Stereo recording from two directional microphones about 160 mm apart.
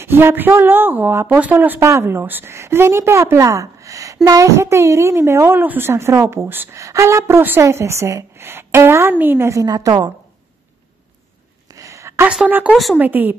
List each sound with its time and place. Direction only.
0.0 s a woman's voice: 15° right (ahead or behind)
11.7 s a sound: 20° right (ahead or behind)
12.3 s speech: 10° right (ahead or behind)